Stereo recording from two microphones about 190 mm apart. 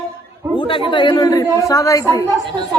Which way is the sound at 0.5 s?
25° left (ahead or behind).